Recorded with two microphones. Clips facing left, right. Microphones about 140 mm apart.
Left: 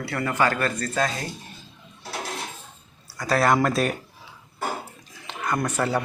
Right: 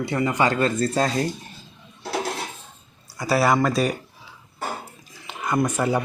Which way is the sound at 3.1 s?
10° right (ahead or behind).